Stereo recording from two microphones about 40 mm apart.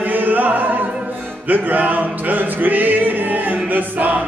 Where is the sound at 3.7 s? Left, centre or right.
Right.